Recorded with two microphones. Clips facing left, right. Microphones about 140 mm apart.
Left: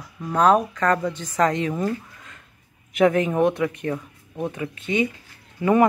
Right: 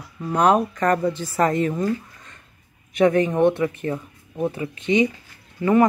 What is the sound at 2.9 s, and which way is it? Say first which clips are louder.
Speech: right 1 dB; centre (ahead or behind).